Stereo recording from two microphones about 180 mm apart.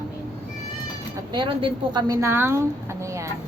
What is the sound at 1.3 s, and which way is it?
A woman's voice, 25° right (ahead or behind).